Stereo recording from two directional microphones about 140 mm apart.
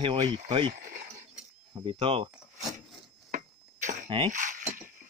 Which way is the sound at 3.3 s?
70° right (ahead or behind).